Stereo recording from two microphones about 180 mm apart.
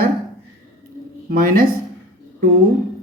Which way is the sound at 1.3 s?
55° right (ahead or behind).